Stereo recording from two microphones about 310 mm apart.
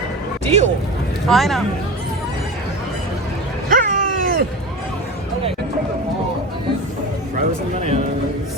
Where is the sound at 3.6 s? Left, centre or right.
Right.